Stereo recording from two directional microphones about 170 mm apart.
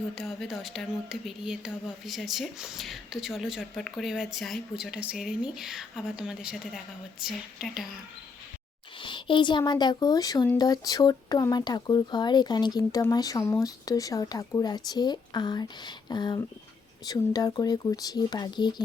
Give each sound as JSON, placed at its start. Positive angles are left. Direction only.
{"t": 0.2, "sound": "a woman's voice", "side_deg": 0}
{"t": 9.0, "sound": "speech", "side_deg": 30}